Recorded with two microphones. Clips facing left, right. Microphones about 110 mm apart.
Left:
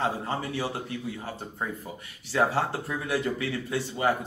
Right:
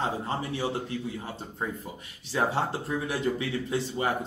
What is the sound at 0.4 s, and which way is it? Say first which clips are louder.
Speech: right 1 dB; 25° right (ahead or behind).